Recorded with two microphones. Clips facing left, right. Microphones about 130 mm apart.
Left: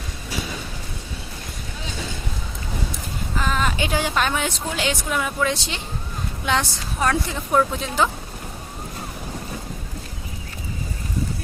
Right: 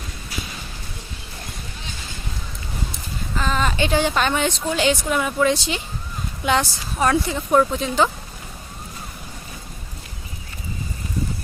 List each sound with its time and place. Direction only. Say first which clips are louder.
3.3 s a woman's voice: right 1 dB; 5° left (ahead or behind)